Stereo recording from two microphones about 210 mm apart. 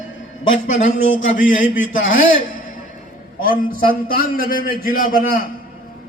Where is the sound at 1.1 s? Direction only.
65° left (ahead or behind).